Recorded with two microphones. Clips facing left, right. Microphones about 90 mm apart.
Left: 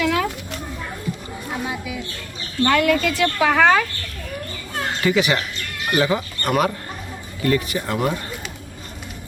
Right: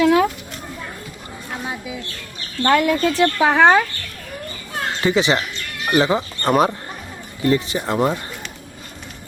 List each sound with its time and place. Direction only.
0.0 s a sound: 30° right (ahead or behind)
1.6 s bird: 25° right (ahead or behind)
2.6 s speech: 25° right (ahead or behind)
4.9 s speech: 25° right (ahead or behind)